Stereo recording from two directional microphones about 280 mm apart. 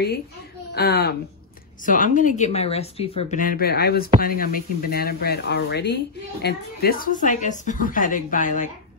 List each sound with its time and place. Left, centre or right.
0.7 s speech: left